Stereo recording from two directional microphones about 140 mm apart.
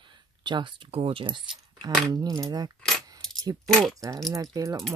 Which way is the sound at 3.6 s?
5° left (ahead or behind).